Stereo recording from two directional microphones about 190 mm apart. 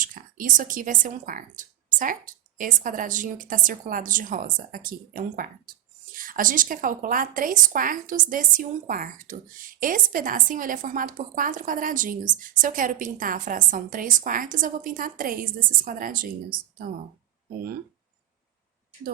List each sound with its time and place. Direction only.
0.0 s a woman's voice: 45° right (ahead or behind)